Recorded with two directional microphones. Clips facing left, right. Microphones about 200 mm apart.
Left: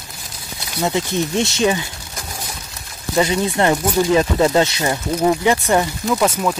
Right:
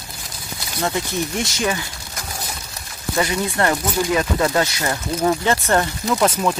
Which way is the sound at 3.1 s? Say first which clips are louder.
Left 4 dB; 20° left (ahead or behind).